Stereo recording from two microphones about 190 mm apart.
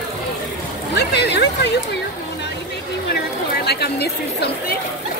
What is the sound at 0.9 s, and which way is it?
Speech, 60° left (ahead or behind).